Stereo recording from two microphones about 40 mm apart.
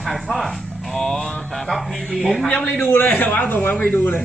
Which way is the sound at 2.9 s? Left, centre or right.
Left.